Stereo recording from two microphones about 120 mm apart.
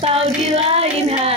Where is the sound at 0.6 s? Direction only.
60° right (ahead or behind).